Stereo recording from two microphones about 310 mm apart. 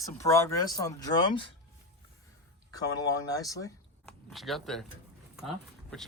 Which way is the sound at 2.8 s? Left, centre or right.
Centre.